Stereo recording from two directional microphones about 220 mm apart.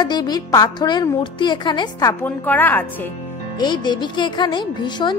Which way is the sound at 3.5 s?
20° left (ahead or behind).